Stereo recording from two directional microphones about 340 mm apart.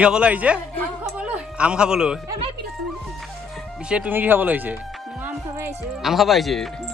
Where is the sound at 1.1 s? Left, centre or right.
Centre.